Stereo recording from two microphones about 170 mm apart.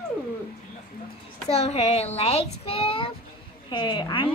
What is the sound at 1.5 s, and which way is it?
A child's voice, 35° left (ahead or behind).